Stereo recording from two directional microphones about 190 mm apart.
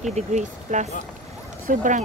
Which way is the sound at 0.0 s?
40° right (ahead or behind).